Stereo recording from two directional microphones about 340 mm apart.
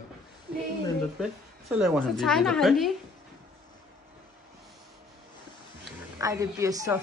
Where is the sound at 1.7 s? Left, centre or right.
Centre.